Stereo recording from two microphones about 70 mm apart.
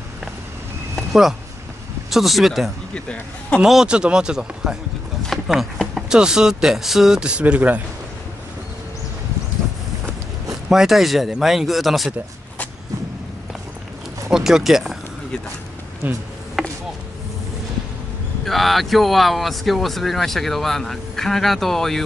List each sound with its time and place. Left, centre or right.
0.9 s a sound: centre
2.0 s speech: centre
2.9 s speech: centre
3.6 s speech: centre
10.5 s speech: centre
14.3 s speech: centre
16.0 s speech: right
16.6 s chop: centre
18.4 s speech: centre